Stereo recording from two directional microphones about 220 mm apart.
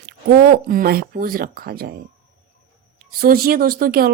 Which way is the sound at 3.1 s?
45° right (ahead or behind).